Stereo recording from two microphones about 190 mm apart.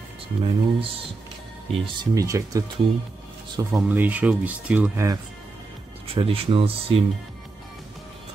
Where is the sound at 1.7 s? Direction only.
20° right (ahead or behind).